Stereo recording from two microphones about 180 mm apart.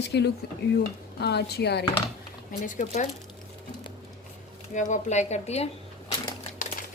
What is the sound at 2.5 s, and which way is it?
Speech, 45° left (ahead or behind).